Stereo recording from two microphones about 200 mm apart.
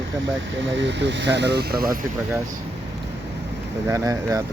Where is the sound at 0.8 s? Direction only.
60° right (ahead or behind).